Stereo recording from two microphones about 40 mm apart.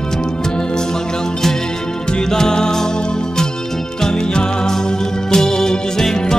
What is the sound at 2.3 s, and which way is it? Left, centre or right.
Music, centre.